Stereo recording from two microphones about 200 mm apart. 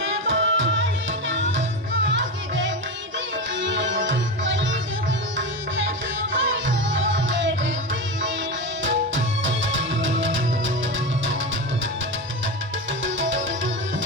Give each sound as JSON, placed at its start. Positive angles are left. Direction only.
{"t": 0.0, "sound": "tabla", "side_deg": -70}
{"t": 1.3, "sound": "music", "side_deg": -70}
{"t": 6.3, "sound": "music", "side_deg": -70}
{"t": 8.8, "sound": "music", "side_deg": -70}